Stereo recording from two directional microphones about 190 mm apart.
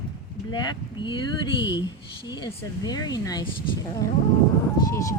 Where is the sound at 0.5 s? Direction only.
25° left (ahead or behind).